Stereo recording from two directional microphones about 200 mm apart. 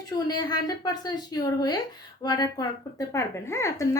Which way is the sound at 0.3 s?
20° left (ahead or behind).